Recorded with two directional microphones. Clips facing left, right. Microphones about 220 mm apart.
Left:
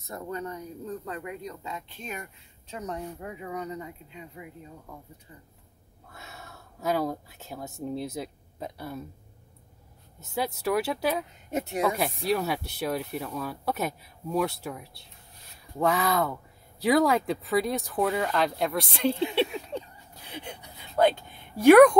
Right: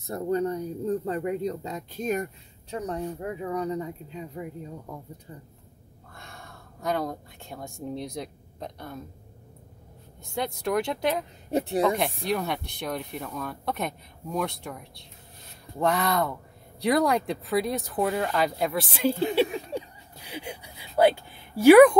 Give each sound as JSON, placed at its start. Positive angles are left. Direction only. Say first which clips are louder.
{"t": 0.0, "sound": "speech", "louder": "right 9 dB", "side_deg": -35}
{"t": 6.1, "sound": "speech", "louder": "even", "side_deg": 5}
{"t": 10.3, "sound": "speech", "louder": "even", "side_deg": 5}
{"t": 11.5, "sound": "speech", "louder": "right 4 dB", "side_deg": -35}
{"t": 12.0, "sound": "speech", "louder": "left 1 dB", "side_deg": 0}
{"t": 20.2, "sound": "speech", "louder": "right 3 dB", "side_deg": -10}